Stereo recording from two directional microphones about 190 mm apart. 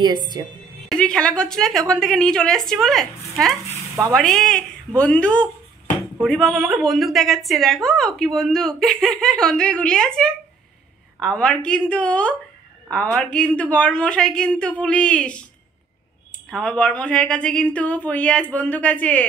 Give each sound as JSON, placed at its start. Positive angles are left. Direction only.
{"t": 0.0, "sound": "a woman's voice", "side_deg": -25}
{"t": 0.8, "sound": "a woman's voice", "side_deg": 5}
{"t": 16.4, "sound": "a woman's voice", "side_deg": 5}